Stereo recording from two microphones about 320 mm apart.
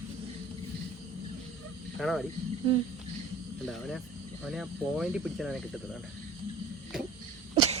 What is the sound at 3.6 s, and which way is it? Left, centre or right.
Speech, centre.